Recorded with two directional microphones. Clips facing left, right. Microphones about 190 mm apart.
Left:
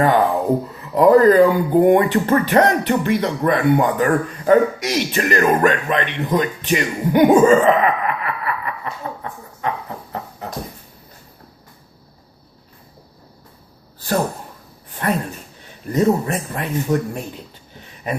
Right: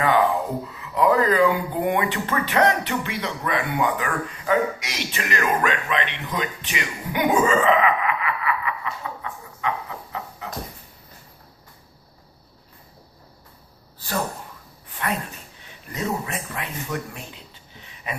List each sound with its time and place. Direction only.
0.7 s speech: 45° left (ahead or behind)
15.0 s speech: 40° left (ahead or behind)